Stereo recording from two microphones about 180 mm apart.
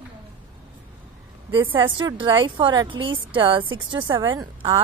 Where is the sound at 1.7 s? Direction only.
25° right (ahead or behind).